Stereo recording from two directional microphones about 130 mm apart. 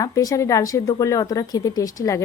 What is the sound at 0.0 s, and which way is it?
A woman's voice, 25° left (ahead or behind).